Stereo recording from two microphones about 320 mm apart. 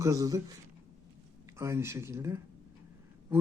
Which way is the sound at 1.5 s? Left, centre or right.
Centre.